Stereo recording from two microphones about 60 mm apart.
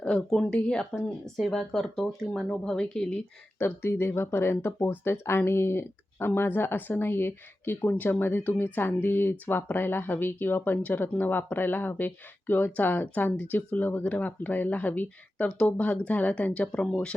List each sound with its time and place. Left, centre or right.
0.3 s speech: centre
3.6 s speech: left; by 17.2 s centre